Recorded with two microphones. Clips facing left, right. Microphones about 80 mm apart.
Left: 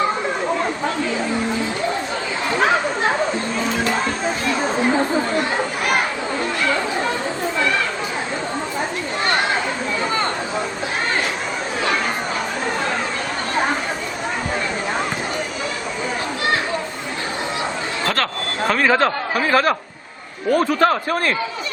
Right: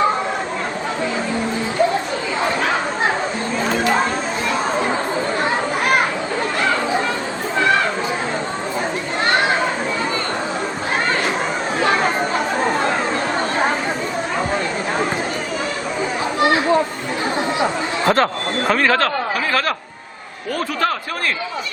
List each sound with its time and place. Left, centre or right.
18.0 s a sound: right
18.7 s speech: centre
18.9 s a man's voice: left